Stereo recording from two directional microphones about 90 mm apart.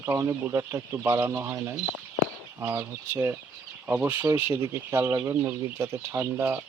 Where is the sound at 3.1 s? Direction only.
25° right (ahead or behind).